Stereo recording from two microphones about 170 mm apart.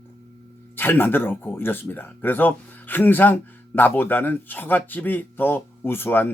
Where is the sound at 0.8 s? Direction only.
10° left (ahead or behind).